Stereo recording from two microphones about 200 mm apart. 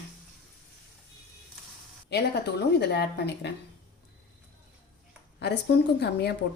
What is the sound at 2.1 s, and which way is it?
A woman's voice, 55° left (ahead or behind).